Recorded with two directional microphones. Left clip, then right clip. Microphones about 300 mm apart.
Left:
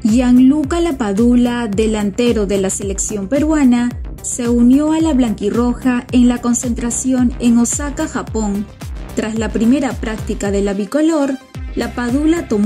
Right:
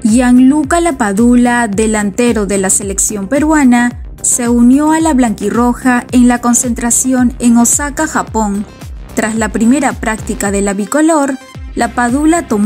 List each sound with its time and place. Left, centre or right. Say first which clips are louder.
0.1 s a woman's voice: right 3 dB; centre